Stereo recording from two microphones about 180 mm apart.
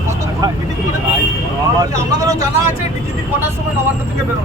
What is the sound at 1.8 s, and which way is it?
Speech, 20° right (ahead or behind).